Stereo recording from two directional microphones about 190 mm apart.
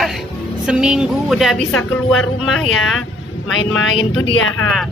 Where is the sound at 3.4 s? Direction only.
90° left.